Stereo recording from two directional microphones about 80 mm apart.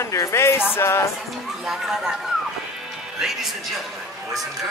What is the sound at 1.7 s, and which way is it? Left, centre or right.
Speech, centre.